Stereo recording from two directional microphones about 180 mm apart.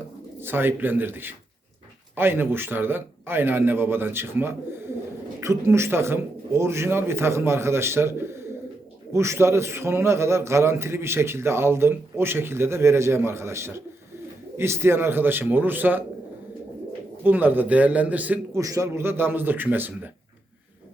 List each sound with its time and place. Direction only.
0.4 s a man's voice: 10° right (ahead or behind)
17.2 s a man's voice: 10° right (ahead or behind)